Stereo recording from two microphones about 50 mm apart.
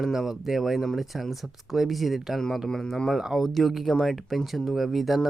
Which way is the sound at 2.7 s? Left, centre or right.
Centre.